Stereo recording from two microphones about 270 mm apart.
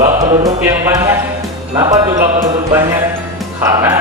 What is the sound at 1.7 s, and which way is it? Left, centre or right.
Music, centre.